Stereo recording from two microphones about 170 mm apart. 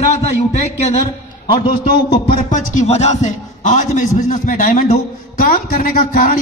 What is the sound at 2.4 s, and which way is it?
A man's voice, 45° left (ahead or behind).